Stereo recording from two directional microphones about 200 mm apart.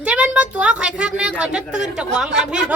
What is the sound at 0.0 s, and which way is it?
A woman's voice, 5° right (ahead or behind).